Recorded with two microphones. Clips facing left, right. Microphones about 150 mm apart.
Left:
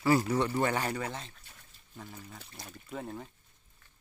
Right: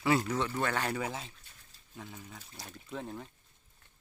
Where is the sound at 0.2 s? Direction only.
10° left (ahead or behind).